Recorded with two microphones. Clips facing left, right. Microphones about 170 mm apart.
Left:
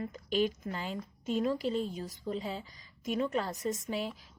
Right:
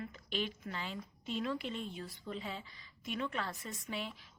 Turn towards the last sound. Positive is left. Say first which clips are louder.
# left 8 dB
turn(degrees=40)  # may be behind; listen again after turning